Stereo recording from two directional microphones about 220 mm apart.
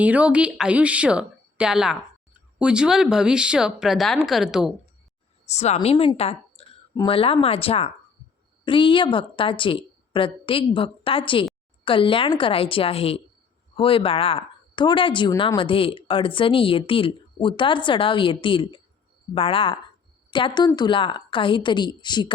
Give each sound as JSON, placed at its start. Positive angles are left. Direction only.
{"t": 0.0, "sound": "a woman's voice", "side_deg": -5}
{"t": 5.5, "sound": "speech", "side_deg": 30}